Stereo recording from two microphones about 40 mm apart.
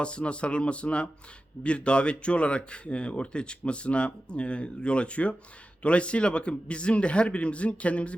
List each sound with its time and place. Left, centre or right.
0.0 s speech: left